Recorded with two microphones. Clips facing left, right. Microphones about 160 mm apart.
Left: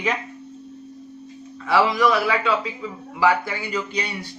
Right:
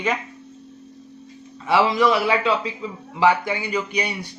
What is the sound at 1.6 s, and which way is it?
A man's voice, 25° right (ahead or behind).